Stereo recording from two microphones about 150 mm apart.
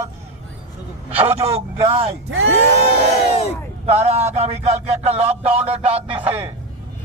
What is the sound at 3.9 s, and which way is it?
A man's voice, 45° right (ahead or behind).